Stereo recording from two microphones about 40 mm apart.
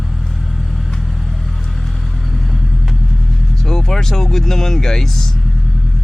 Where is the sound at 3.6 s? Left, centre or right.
Centre.